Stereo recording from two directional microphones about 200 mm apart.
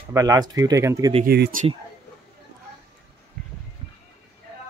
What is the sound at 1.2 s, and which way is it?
Speech, 55° right (ahead or behind).